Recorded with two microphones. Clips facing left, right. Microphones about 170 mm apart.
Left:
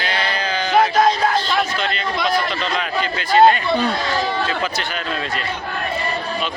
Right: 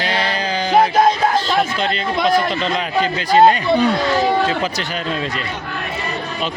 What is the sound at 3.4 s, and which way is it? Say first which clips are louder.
Speech: right 1 dB; 25° right (ahead or behind).